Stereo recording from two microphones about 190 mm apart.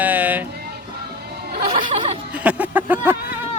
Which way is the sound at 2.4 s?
10° right (ahead or behind).